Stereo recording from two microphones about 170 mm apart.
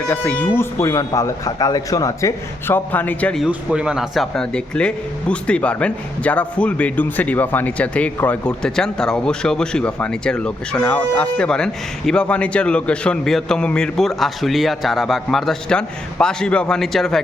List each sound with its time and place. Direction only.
0.1 s speech: 10° left (ahead or behind)
3.4 s speech: 5° right (ahead or behind)